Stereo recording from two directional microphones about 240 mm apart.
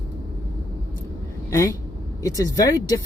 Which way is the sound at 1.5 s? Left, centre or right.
Centre.